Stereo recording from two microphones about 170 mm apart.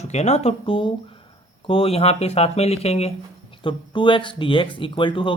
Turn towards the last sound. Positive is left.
turn(degrees=30)  # may be behind; listen again after turning